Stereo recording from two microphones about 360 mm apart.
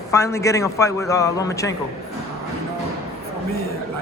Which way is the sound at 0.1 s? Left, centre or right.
Centre.